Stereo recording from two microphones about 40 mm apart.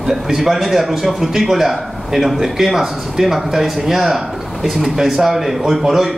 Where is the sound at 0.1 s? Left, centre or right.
Centre.